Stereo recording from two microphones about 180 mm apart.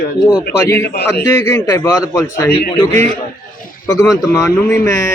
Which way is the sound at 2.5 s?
60° left (ahead or behind).